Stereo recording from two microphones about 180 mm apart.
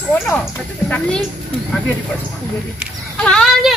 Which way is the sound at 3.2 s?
5° left (ahead or behind).